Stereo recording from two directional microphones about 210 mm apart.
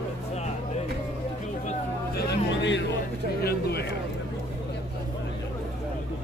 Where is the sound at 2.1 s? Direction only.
60° left (ahead or behind).